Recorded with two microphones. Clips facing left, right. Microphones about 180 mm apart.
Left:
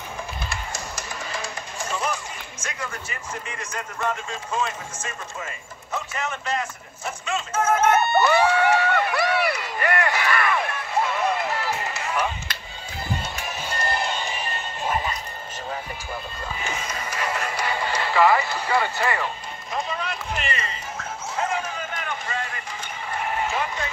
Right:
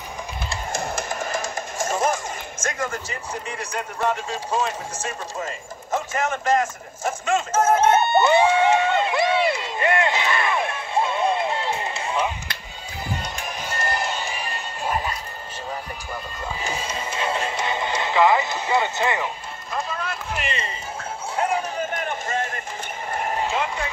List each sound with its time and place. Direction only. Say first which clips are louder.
0.7 s music: right 7 dB; 55° right (ahead or behind)
2.6 s speech: right 6 dB; 45° right (ahead or behind)
7.7 s crowd: right 1 dB; 25° right (ahead or behind)
14.0 s music: even; 10° right (ahead or behind)
16.6 s music: right 2 dB; 30° right (ahead or behind)
20.4 s a sound: right 1 dB; 25° right (ahead or behind)
21.9 s a sound: right 4 dB; 45° right (ahead or behind)